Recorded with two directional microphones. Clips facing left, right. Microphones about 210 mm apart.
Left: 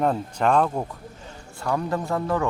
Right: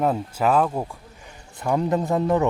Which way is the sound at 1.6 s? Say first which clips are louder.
Right 4 dB; 20° right (ahead or behind).